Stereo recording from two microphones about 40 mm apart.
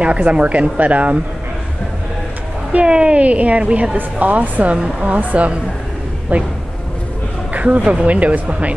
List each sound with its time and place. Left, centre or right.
0.0 s a woman's voice: right
2.7 s a woman's voice: right
4.7 s speech: right
5.1 s a woman's voice: right
7.5 s a woman's voice: right